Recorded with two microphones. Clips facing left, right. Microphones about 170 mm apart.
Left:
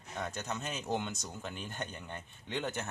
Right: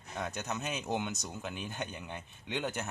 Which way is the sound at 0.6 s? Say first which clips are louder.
Right 1 dB; 15° right (ahead or behind).